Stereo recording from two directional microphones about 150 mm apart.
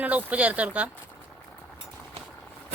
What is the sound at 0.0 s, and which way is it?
Speech, 10° right (ahead or behind).